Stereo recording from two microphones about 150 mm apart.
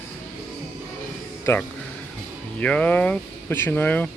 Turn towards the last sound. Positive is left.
turn(degrees=10)  # may be behind; listen again after turning